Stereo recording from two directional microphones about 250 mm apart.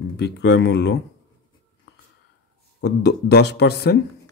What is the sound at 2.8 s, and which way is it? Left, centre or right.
Speech, left.